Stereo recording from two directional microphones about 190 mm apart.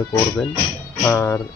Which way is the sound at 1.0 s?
10° left (ahead or behind).